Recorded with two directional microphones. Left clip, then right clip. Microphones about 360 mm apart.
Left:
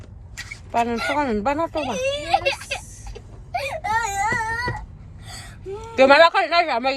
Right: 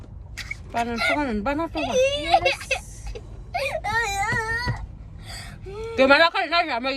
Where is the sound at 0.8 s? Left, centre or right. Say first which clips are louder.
Even; centre.